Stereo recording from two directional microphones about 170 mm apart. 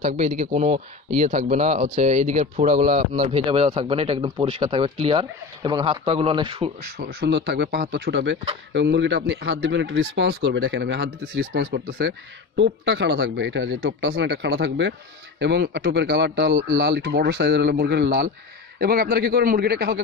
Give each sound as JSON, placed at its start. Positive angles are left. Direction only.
{"t": 0.0, "sound": "speech", "side_deg": -45}
{"t": 3.3, "sound": "speech", "side_deg": -30}
{"t": 7.0, "sound": "speech", "side_deg": -80}
{"t": 18.8, "sound": "a man's voice", "side_deg": -60}